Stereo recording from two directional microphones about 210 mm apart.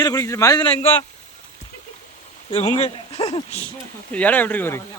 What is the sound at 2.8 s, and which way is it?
Speech, 30° left (ahead or behind).